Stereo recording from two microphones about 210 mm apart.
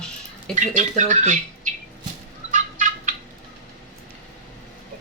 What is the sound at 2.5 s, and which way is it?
Fowl, 35° right (ahead or behind).